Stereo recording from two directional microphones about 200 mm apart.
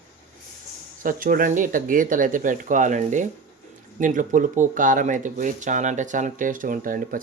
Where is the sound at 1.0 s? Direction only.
45° right (ahead or behind).